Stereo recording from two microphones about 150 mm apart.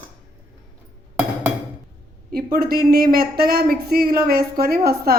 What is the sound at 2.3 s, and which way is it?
A woman's voice, 85° right.